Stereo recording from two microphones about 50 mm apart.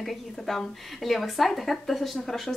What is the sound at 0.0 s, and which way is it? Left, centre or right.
Speech, centre.